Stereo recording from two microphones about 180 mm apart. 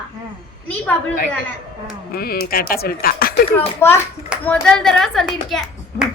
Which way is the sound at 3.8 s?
15° left (ahead or behind).